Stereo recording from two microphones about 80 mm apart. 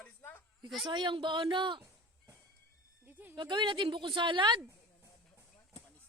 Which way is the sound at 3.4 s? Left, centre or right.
Right.